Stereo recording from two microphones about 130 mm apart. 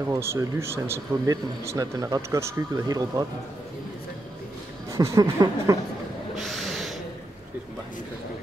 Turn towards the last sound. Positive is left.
turn(degrees=0)  # may be behind; listen again after turning